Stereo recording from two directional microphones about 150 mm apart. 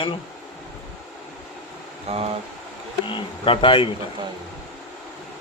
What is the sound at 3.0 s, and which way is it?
Speech, 35° left (ahead or behind).